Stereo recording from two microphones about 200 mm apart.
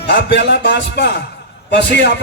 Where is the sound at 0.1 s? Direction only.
65° left (ahead or behind).